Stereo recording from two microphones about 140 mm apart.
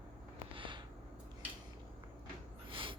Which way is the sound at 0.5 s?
35° right (ahead or behind).